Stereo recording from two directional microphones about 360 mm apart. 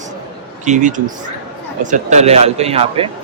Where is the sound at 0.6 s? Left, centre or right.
Centre.